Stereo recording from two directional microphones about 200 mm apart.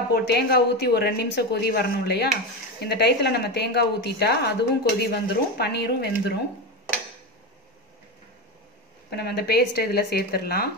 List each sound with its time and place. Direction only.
0.1 s a woman's voice: 55° left (ahead or behind)
9.1 s speech: 55° left (ahead or behind)